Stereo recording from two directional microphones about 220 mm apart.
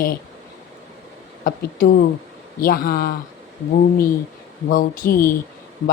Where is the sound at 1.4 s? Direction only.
40° left (ahead or behind).